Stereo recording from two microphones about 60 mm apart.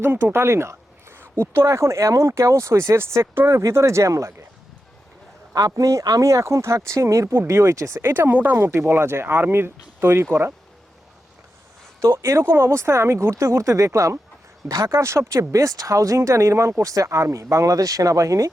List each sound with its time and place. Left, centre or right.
0.0 s speech: right
5.5 s speech: right
8.0 s speech: right
8.5 s speech: right
12.1 s speech: right